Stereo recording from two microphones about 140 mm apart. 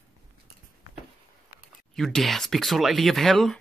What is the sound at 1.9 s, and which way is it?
Speech, centre (ahead or behind).